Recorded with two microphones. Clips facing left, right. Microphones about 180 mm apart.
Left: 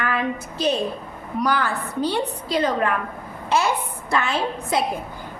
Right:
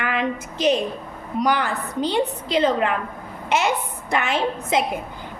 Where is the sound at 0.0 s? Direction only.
20° right (ahead or behind).